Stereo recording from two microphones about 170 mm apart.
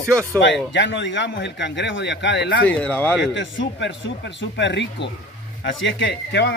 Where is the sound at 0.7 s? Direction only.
90° left.